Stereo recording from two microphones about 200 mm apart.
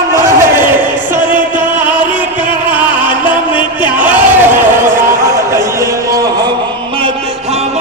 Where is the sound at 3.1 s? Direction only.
25° left (ahead or behind).